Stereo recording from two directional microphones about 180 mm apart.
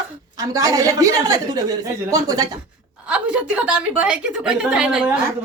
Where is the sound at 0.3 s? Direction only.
20° right (ahead or behind).